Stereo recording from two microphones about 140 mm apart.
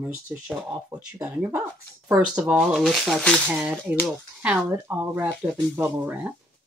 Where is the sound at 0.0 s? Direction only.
10° right (ahead or behind).